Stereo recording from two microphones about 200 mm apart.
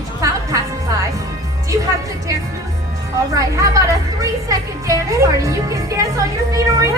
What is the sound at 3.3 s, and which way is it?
Speech, 15° right (ahead or behind).